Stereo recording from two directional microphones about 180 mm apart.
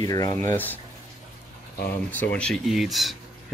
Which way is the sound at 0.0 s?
20° left (ahead or behind).